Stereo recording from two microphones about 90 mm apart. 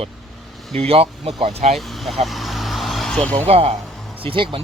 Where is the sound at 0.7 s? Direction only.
90° right.